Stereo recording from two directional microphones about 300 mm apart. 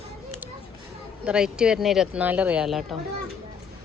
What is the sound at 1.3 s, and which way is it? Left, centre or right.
Speech, centre.